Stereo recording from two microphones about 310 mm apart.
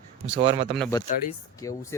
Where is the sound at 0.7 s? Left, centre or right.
Centre.